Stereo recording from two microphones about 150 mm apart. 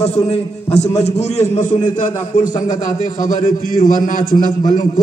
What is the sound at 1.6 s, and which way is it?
A man's voice, 60° left (ahead or behind).